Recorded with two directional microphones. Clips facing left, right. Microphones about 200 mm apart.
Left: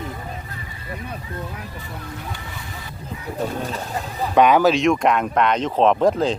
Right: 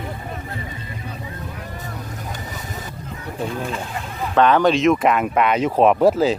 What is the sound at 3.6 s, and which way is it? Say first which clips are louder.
Speech: even; 40° left (ahead or behind).